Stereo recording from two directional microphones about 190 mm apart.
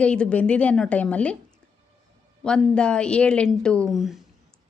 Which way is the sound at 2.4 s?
5° left (ahead or behind).